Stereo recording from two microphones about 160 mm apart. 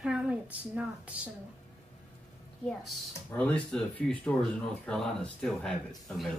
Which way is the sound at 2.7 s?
5° left (ahead or behind).